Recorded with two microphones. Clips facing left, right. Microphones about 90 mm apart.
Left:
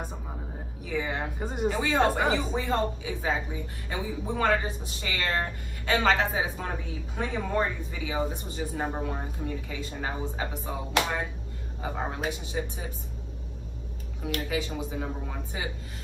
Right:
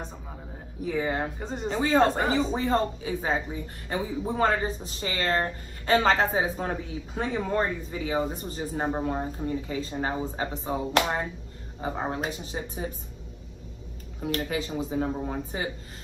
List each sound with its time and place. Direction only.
0.8 s speech: 40° right (ahead or behind)
1.4 s speech: 10° left (ahead or behind)
1.8 s speech: 40° right (ahead or behind)
14.2 s speech: 40° right (ahead or behind)